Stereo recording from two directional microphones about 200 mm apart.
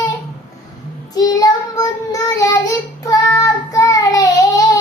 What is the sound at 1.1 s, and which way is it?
Child singing, 15° left (ahead or behind).